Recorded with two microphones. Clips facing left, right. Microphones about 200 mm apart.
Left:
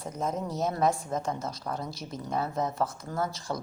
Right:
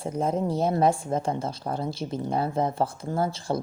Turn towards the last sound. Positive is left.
turn(degrees=-30)  # may be behind; listen again after turning